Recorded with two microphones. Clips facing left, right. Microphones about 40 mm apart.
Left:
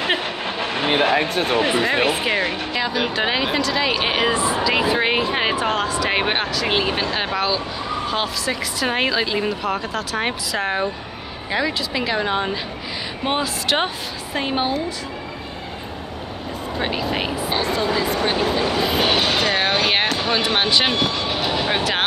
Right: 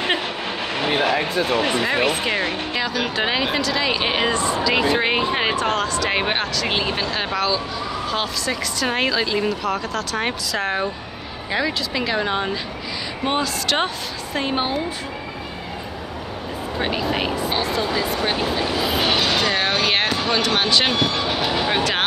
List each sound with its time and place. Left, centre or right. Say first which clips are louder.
0.8 s a sound: left 2 dB; left
1.6 s speech: left 1 dB; centre
16.8 s speech: right 1 dB; centre